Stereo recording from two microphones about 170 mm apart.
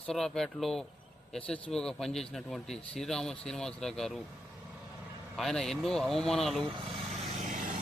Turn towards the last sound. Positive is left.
turn(degrees=-50)  # may be behind; listen again after turning